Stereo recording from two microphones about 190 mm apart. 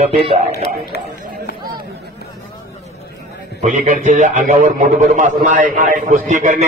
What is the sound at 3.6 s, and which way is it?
A man's voice, 40° right (ahead or behind).